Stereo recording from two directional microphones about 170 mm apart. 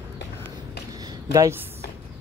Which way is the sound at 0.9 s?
20° right (ahead or behind).